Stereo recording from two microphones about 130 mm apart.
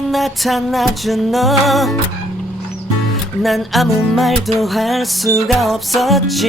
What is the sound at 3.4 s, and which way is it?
Music, centre (ahead or behind).